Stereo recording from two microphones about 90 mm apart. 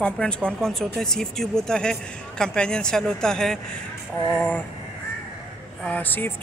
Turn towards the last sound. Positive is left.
turn(degrees=20)  # may be behind; listen again after turning